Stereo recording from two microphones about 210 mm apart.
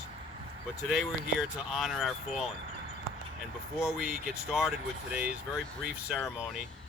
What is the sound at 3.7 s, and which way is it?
Speech, centre (ahead or behind).